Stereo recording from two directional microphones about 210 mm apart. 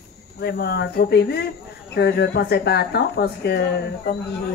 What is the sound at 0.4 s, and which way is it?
Speech, 50° left (ahead or behind).